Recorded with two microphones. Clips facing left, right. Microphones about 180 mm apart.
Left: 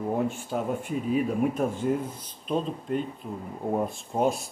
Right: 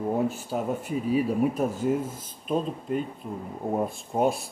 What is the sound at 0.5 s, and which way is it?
Speech, 5° right (ahead or behind).